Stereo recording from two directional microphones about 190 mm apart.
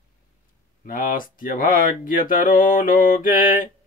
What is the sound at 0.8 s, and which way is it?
Speech, 45° left (ahead or behind).